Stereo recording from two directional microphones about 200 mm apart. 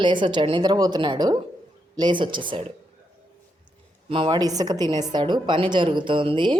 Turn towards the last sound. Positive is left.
turn(degrees=-25)  # may be behind; listen again after turning